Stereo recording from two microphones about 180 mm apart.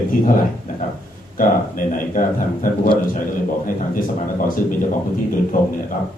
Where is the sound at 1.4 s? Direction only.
50° left (ahead or behind).